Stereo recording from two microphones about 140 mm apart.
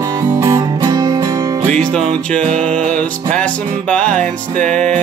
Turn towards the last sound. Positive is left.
turn(degrees=5)  # may be behind; listen again after turning